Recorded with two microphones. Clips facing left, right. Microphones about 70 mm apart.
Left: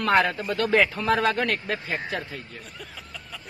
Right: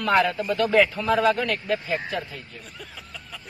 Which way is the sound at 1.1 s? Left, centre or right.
Left.